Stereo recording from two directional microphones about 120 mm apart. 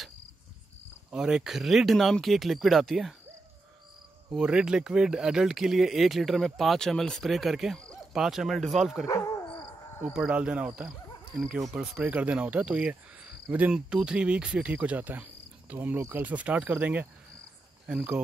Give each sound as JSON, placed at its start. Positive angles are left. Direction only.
{"t": 1.1, "sound": "speech", "side_deg": -5}
{"t": 4.3, "sound": "speech", "side_deg": -5}
{"t": 9.0, "sound": "dog", "side_deg": 30}
{"t": 10.1, "sound": "speech", "side_deg": -10}